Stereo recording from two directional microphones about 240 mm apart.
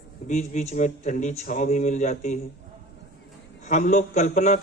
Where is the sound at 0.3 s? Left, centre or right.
Left.